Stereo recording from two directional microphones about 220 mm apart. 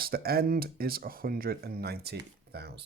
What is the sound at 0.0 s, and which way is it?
Speech, 45° right (ahead or behind).